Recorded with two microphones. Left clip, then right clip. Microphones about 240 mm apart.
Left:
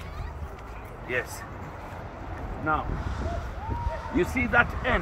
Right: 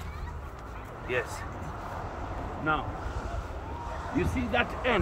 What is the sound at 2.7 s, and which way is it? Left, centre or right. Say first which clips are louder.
Speech: left 2 dB; centre.